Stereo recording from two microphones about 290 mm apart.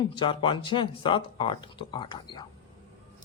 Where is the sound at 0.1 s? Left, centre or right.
Centre.